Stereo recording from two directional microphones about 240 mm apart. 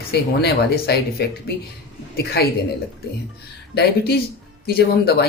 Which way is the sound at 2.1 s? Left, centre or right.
Left.